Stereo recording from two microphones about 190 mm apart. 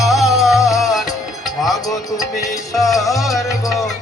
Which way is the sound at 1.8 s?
20° left (ahead or behind).